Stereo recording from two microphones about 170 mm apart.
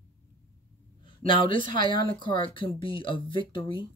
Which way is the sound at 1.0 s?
30° left (ahead or behind).